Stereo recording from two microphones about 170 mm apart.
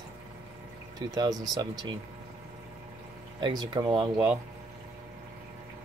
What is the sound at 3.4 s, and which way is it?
Speech, 25° right (ahead or behind).